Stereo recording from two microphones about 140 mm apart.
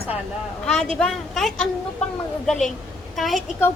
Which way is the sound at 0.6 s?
5° left (ahead or behind).